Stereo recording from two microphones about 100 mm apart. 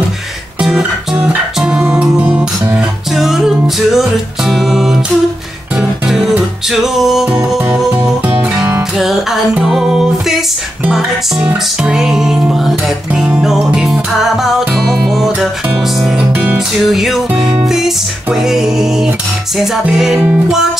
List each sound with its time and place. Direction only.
0.6 s music: 5° right (ahead or behind)
8.9 s music: centre (ahead or behind)
20.2 s music: 15° right (ahead or behind)